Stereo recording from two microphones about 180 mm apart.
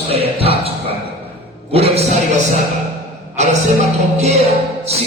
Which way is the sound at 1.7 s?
35° right (ahead or behind).